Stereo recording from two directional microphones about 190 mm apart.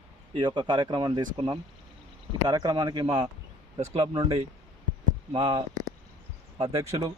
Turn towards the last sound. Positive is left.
turn(degrees=-15)  # may be behind; listen again after turning